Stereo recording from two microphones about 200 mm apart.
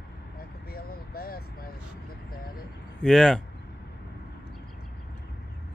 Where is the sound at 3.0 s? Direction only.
5° left (ahead or behind).